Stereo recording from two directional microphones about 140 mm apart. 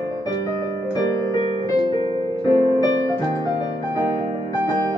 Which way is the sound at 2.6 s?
25° left (ahead or behind).